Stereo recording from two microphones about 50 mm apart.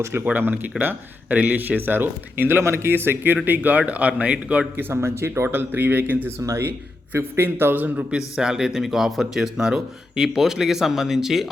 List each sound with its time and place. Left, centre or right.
0.0 s speech: right
0.3 s speech: right
2.9 s speech: right
4.9 s speech: right
7.1 s speech: right
8.4 s speech: centre